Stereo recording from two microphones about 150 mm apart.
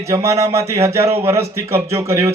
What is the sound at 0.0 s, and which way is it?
A man's voice, 20° right (ahead or behind).